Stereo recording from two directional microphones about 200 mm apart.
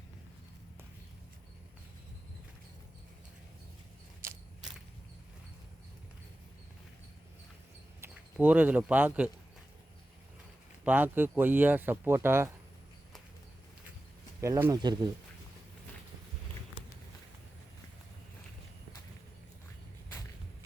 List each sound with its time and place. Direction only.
4.2 s a sound: 15° right (ahead or behind)
8.0 s speech: 10° right (ahead or behind)
10.8 s speech: 10° right (ahead or behind)
14.4 s speech: 15° right (ahead or behind)